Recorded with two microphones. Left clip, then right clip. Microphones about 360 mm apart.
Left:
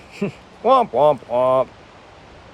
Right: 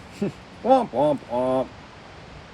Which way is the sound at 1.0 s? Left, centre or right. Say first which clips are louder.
Left 6 dB; left.